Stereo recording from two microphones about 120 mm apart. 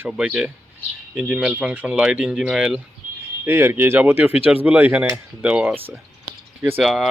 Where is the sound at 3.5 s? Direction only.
20° right (ahead or behind).